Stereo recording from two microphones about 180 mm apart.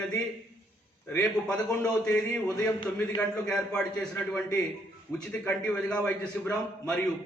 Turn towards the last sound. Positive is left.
turn(degrees=5)  # may be behind; listen again after turning